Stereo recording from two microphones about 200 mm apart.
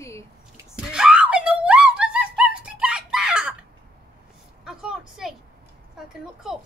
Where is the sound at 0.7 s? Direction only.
5° right (ahead or behind).